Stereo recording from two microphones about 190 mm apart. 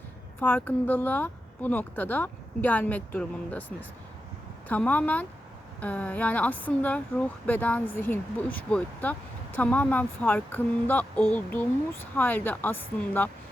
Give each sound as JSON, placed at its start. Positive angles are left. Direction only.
{"t": 0.3, "sound": "speech", "side_deg": 10}